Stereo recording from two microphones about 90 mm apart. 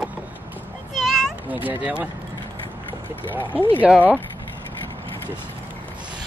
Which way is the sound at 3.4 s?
20° left (ahead or behind).